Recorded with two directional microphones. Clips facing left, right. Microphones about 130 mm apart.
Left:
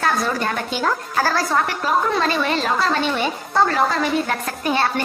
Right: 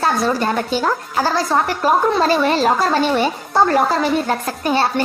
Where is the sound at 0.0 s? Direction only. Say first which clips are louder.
Right 3 dB; 30° right (ahead or behind).